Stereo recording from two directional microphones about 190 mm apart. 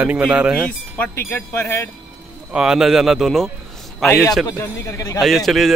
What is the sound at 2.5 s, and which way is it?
A man's voice, 5° right (ahead or behind).